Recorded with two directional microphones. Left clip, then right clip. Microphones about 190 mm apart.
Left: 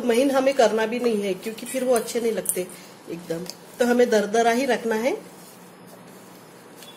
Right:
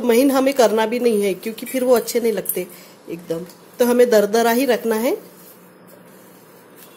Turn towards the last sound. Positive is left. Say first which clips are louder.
# right 4 dB
turn(degrees=-45)  # may be behind; listen again after turning